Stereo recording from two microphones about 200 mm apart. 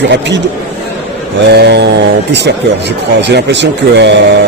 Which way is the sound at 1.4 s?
55° right (ahead or behind).